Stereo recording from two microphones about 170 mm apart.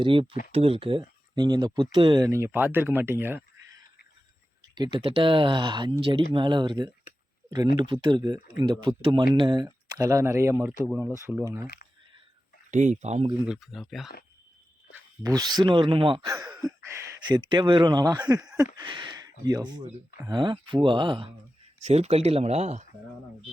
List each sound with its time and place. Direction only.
0.0 s speech: 30° right (ahead or behind); by 3.8 s 15° right (ahead or behind)
4.7 s speech: 25° right (ahead or behind)
8.0 s speech: 25° right (ahead or behind)
12.7 s speech: 45° right (ahead or behind)
13.5 s speech: centre (ahead or behind)
15.2 s speech: 20° right (ahead or behind)
21.8 s speech: 40° right (ahead or behind)